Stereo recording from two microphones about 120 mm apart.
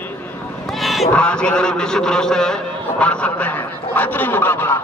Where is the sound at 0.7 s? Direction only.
Centre (ahead or behind).